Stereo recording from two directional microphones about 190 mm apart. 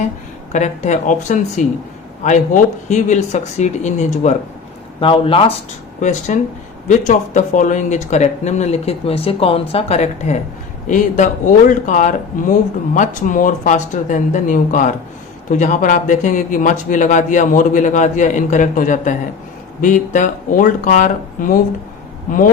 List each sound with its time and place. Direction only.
0.5 s speech: 40° left (ahead or behind)
6.0 s speech: 40° left (ahead or behind)